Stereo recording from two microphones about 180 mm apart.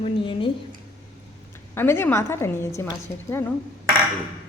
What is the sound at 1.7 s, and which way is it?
A woman's voice, 15° left (ahead or behind).